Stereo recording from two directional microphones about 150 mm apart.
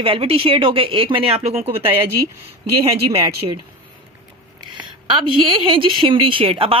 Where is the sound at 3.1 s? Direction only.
40° right (ahead or behind).